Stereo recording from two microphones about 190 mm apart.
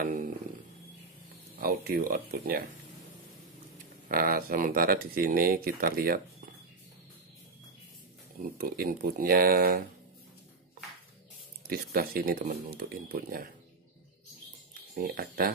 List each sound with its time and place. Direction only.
0.0 s a sound: 45° right (ahead or behind)
1.6 s speech: 50° right (ahead or behind)
4.1 s speech: 50° right (ahead or behind)
8.4 s speech: 50° right (ahead or behind)
11.6 s speech: 50° right (ahead or behind)
14.7 s speech: 50° right (ahead or behind)